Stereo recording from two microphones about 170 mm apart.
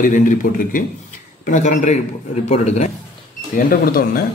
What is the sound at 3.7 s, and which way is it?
Speech, 60° left (ahead or behind).